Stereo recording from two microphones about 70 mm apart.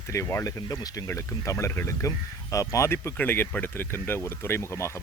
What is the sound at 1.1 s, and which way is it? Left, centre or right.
Speech, left.